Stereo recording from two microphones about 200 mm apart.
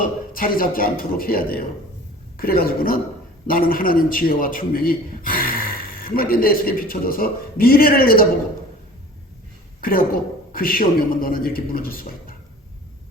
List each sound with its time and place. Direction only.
0.0 s a man's voice: 45° left (ahead or behind)
10.5 s a man's voice: 45° left (ahead or behind)